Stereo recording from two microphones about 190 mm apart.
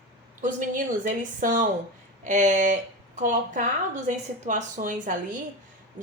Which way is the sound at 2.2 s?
40° right (ahead or behind).